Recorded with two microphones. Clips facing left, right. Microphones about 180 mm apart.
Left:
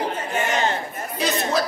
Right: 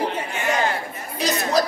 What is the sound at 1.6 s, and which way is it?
Speech, 40° right (ahead or behind).